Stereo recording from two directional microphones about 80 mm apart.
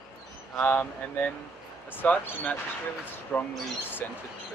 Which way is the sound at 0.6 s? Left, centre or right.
Left.